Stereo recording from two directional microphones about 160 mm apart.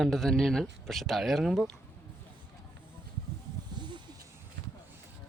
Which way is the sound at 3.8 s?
25° right (ahead or behind).